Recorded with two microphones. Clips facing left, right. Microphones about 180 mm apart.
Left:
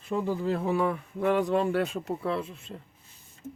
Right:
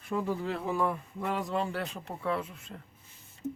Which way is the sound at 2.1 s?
30° left (ahead or behind).